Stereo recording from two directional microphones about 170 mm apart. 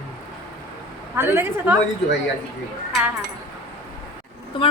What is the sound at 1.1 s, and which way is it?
Speech, 15° right (ahead or behind).